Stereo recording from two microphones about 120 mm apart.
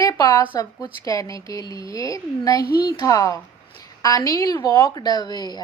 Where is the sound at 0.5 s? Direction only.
30° left (ahead or behind).